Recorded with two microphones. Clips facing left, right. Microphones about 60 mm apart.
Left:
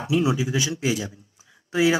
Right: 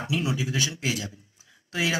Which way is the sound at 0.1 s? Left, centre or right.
Left.